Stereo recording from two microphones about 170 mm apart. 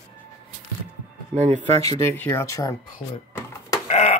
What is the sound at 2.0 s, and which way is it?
Speech, 15° left (ahead or behind).